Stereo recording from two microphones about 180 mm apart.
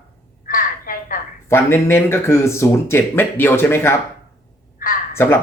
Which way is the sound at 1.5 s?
10° left (ahead or behind).